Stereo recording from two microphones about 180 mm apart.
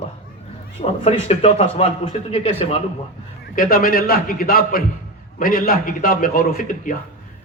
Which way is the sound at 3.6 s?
55° left (ahead or behind).